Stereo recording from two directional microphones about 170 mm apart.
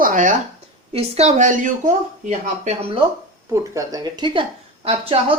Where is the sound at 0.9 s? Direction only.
40° right (ahead or behind).